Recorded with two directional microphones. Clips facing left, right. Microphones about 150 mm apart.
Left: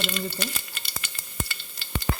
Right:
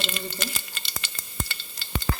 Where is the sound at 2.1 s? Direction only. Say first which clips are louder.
Even; 25° left (ahead or behind).